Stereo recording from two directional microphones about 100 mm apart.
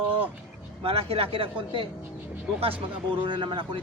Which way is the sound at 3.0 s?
55° right (ahead or behind).